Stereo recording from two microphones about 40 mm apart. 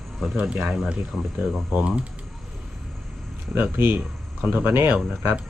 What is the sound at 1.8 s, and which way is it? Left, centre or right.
Speech, right.